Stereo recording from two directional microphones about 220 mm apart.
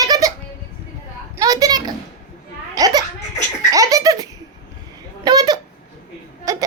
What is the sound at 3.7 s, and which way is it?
Laughter, 15° right (ahead or behind).